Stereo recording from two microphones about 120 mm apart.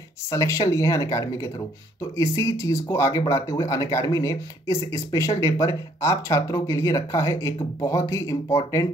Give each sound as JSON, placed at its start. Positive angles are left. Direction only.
{"t": 0.3, "sound": "speech", "side_deg": 25}